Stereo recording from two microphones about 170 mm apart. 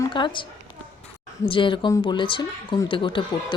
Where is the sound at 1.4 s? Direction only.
30° left (ahead or behind).